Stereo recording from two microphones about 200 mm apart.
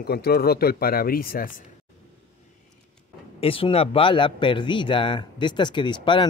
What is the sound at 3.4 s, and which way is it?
Speech, 25° left (ahead or behind).